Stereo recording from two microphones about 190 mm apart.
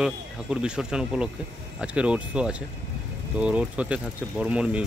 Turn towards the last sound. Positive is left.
turn(degrees=-5)  # may be behind; listen again after turning